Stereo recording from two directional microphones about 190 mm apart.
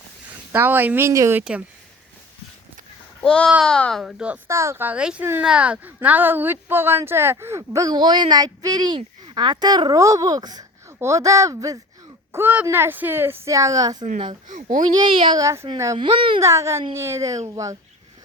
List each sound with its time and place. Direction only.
0.5 s speech: 10° right (ahead or behind)
3.2 s a child's voice: 5° left (ahead or behind); by 14.0 s 20° right (ahead or behind)
14.4 s a child's voice: 45° right (ahead or behind)
14.9 s a child's voice: 25° right (ahead or behind)
16.0 s a child's voice: 25° right (ahead or behind)
16.4 s speech: 15° right (ahead or behind)